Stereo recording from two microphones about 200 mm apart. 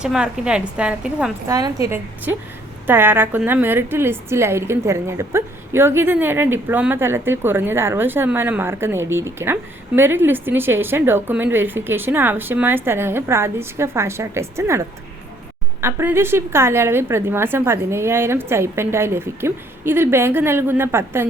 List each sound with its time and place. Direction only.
0.0 s a woman's voice: 5° right (ahead or behind)
1.5 s a woman's voice: 20° right (ahead or behind)